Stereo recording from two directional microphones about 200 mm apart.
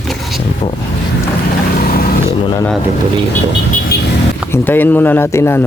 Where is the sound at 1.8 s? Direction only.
50° left (ahead or behind).